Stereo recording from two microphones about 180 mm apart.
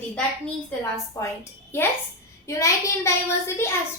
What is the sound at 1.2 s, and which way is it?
A child's voice, 15° left (ahead or behind).